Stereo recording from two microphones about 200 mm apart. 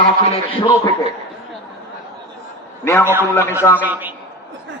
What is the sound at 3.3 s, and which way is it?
Speech, 10° left (ahead or behind).